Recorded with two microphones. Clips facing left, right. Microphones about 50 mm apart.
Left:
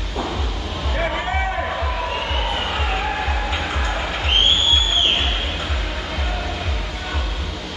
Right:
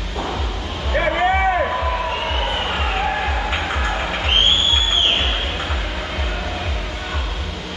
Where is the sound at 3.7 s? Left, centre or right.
Centre.